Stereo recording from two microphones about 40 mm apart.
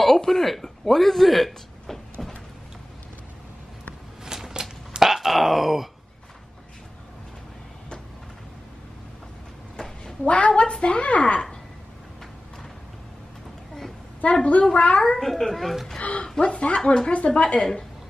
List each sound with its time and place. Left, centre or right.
0.0 s a sound: centre
2.2 s vehicle: centre
4.2 s groan: centre
10.2 s a woman's voice: left
14.3 s speech: left
15.1 s speech: centre
16.0 s a woman's voice: left
17.4 s a woman's voice: left